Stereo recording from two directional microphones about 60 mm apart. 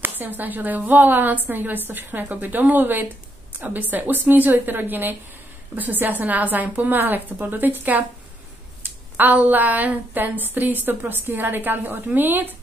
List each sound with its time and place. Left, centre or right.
0.0 s a woman's voice: right